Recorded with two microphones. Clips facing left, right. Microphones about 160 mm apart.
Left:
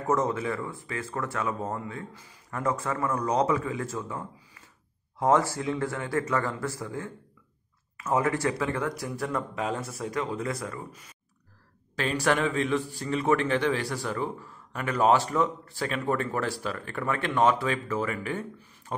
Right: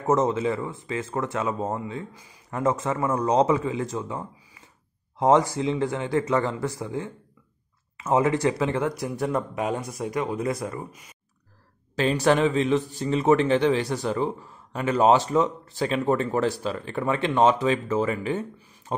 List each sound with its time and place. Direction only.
0.0 s speech: 20° right (ahead or behind)
10.9 s speech: 10° right (ahead or behind)
12.0 s speech: 30° right (ahead or behind)
18.9 s a sound: 25° right (ahead or behind)